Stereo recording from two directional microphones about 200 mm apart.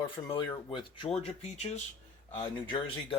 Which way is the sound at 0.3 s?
20° left (ahead or behind).